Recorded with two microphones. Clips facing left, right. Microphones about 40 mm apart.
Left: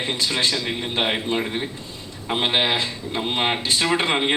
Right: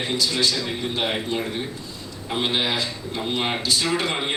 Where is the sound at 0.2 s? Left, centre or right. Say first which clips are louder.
Even; left.